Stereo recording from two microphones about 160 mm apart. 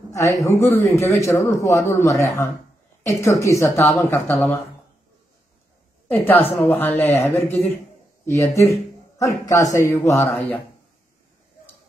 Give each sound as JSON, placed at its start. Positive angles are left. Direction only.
{"t": 0.1, "sound": "a man's voice", "side_deg": 20}
{"t": 6.1, "sound": "a man's voice", "side_deg": 10}
{"t": 6.4, "sound": "speech", "side_deg": 35}
{"t": 7.2, "sound": "a man's voice", "side_deg": 15}